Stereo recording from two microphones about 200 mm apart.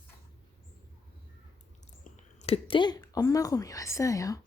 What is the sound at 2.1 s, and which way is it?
Speech, 30° left (ahead or behind).